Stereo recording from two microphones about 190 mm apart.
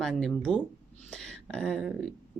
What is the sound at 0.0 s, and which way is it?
Speech, centre (ahead or behind).